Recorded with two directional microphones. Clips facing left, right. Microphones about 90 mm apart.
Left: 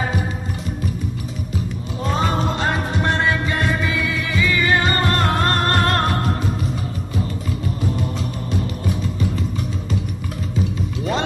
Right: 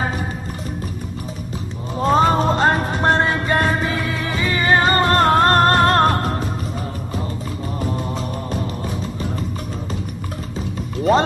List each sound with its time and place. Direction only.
2.0 s music: 40° right (ahead or behind)